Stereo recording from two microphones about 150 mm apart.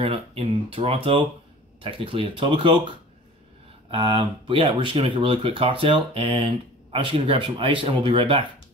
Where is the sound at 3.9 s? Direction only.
35° right (ahead or behind).